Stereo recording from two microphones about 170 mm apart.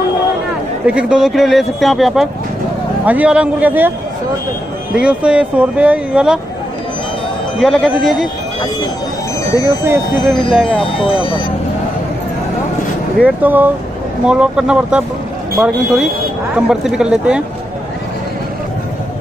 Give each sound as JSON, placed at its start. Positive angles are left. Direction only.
{"t": 0.8, "sound": "speech", "side_deg": -5}
{"t": 4.9, "sound": "speech", "side_deg": -5}
{"t": 7.5, "sound": "speech", "side_deg": 0}
{"t": 10.3, "sound": "speech", "side_deg": -5}
{"t": 10.8, "sound": "speech", "side_deg": 30}
{"t": 13.2, "sound": "speech", "side_deg": -10}